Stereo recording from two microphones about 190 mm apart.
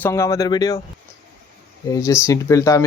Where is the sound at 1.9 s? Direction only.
15° left (ahead or behind).